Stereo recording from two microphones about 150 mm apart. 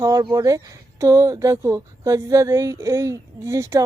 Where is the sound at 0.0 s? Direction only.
25° right (ahead or behind).